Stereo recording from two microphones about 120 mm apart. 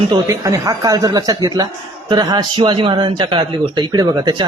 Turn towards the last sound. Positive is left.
turn(degrees=-35)  # may be behind; listen again after turning